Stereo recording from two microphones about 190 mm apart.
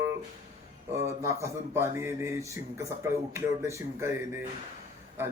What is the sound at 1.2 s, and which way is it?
A man's voice, 15° right (ahead or behind).